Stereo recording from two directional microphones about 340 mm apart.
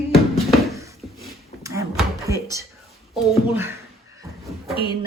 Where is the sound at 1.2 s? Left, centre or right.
Centre.